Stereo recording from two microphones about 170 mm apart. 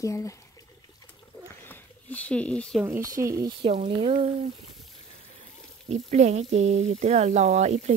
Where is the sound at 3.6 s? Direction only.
35° right (ahead or behind).